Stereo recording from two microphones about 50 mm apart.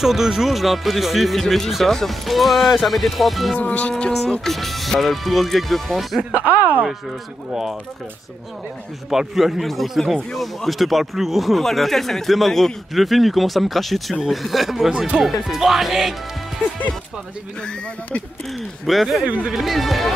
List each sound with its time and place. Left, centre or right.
0.0 s speech: centre
3.5 s speech: left
4.5 s speech: centre
6.3 s speech: right
9.1 s speech: centre
18.5 s speech: centre
19.2 s speech: right
19.5 s speech: centre